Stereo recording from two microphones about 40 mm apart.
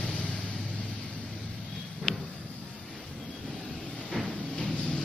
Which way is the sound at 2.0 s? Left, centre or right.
Centre.